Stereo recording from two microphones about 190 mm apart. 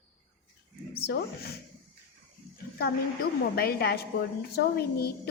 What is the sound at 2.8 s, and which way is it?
A woman's voice, 55° left (ahead or behind).